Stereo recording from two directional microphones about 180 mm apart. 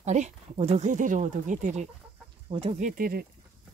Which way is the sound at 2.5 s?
30° right (ahead or behind).